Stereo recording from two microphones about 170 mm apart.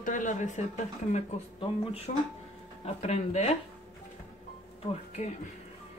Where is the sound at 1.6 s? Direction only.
35° left (ahead or behind).